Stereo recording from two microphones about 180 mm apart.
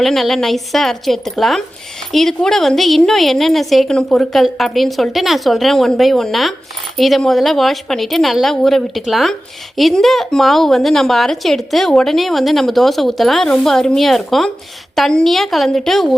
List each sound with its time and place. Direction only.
0.0 s speech: centre (ahead or behind)